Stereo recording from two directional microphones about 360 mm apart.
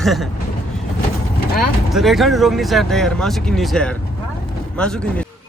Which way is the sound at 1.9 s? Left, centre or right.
Centre.